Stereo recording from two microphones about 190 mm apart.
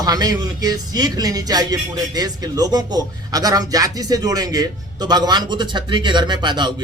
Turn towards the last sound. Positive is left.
turn(degrees=-25)  # may be behind; listen again after turning